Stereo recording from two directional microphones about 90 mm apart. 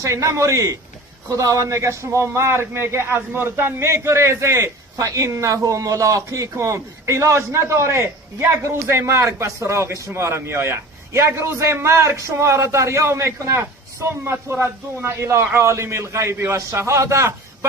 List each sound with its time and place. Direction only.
0.0 s a man's voice: 35° right (ahead or behind)